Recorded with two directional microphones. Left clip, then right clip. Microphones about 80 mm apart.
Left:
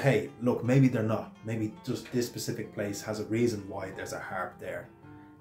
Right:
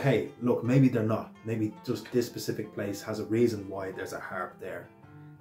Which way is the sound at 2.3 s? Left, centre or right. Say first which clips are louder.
Right 1 dB; left.